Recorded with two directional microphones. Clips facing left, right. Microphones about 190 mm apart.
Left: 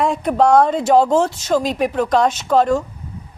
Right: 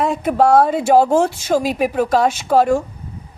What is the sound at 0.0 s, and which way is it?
Speech, 5° right (ahead or behind).